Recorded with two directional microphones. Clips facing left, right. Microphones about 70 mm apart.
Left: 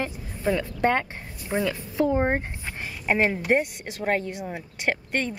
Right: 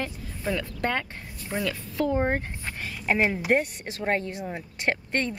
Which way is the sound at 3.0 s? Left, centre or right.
Centre.